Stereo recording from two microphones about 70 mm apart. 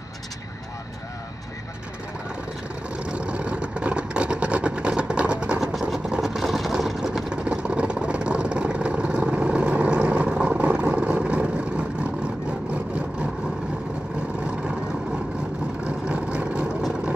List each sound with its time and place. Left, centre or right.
3.0 s vehicle: centre
5.6 s vehicle: centre
14.4 s vehicle: centre
15.8 s vehicle: centre